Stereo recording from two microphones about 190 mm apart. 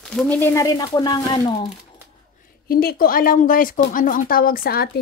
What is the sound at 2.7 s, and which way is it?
Speech, 50° left (ahead or behind).